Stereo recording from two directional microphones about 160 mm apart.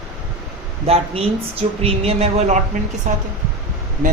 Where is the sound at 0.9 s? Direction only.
40° right (ahead or behind).